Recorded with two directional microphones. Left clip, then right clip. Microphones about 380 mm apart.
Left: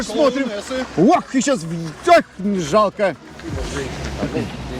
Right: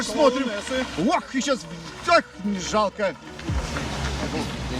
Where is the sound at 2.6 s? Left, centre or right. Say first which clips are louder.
Left 7 dB; centre.